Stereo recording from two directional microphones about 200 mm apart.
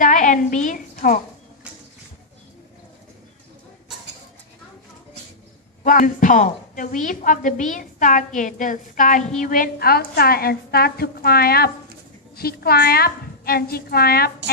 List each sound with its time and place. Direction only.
0.0 s a woman's voice: 40° left (ahead or behind)
5.8 s a woman's voice: 40° left (ahead or behind)